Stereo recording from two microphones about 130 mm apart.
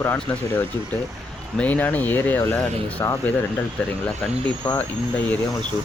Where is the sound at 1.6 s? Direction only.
10° left (ahead or behind).